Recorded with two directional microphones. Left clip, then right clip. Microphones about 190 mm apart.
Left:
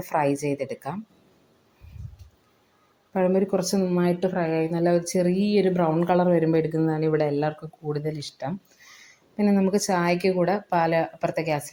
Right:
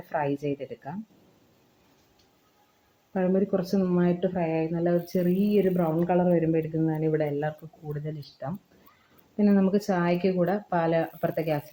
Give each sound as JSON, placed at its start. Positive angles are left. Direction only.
{"t": 0.1, "sound": "speech", "side_deg": 15}
{"t": 3.1, "sound": "speech", "side_deg": 10}
{"t": 9.3, "sound": "speech", "side_deg": 10}